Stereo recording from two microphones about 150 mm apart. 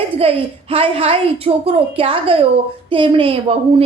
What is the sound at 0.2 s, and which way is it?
A woman's voice, 40° right (ahead or behind).